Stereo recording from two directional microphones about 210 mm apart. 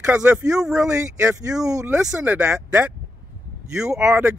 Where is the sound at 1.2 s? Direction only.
15° right (ahead or behind).